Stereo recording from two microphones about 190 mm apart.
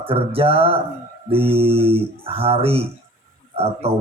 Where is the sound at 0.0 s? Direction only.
30° right (ahead or behind).